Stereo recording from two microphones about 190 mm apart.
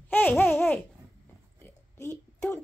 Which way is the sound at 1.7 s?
15° left (ahead or behind).